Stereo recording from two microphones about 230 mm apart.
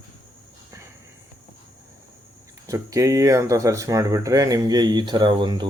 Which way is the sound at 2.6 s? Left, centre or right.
Centre.